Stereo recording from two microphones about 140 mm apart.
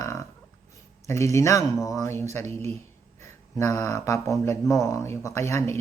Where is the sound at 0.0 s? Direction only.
20° left (ahead or behind).